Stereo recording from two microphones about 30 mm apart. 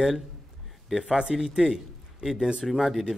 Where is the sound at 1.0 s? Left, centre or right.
Right.